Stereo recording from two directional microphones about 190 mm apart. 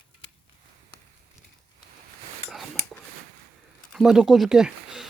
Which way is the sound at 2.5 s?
Centre (ahead or behind).